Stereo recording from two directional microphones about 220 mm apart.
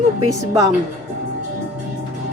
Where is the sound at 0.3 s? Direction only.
15° right (ahead or behind).